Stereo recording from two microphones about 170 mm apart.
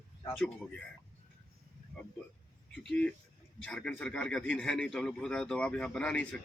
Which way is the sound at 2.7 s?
5° left (ahead or behind).